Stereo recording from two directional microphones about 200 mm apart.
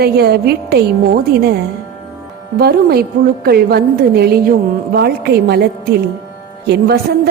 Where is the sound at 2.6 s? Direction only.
50° right (ahead or behind).